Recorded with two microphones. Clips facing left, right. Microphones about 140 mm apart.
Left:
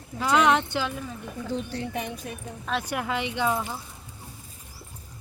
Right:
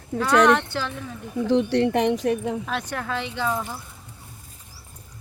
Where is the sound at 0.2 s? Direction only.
10° left (ahead or behind).